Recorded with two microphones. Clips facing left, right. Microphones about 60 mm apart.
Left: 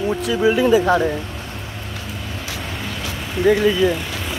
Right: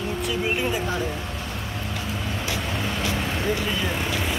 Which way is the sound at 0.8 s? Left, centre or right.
Left.